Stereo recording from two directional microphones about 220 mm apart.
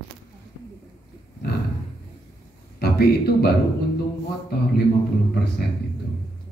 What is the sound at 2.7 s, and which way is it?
Speech, 45° left (ahead or behind).